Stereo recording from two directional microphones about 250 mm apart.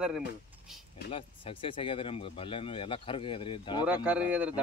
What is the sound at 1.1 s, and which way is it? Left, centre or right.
Speech, left.